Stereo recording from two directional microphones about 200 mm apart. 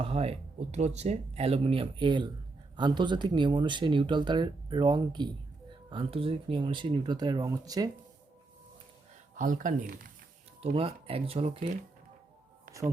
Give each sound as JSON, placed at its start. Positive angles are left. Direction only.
{"t": 0.0, "sound": "speech", "side_deg": -30}
{"t": 9.3, "sound": "speech", "side_deg": -40}
{"t": 10.6, "sound": "speech", "side_deg": -30}